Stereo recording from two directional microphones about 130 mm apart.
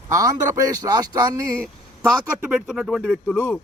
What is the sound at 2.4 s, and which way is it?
Speech, 5° right (ahead or behind).